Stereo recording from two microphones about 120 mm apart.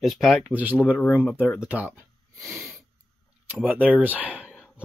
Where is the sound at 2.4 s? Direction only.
25° right (ahead or behind).